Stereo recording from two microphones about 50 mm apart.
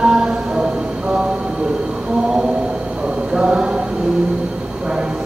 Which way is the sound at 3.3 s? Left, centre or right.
Centre.